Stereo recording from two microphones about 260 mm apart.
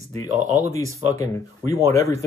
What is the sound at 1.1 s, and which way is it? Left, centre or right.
Speech, centre.